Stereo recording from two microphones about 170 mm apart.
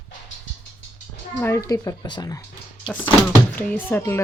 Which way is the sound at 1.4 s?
20° left (ahead or behind).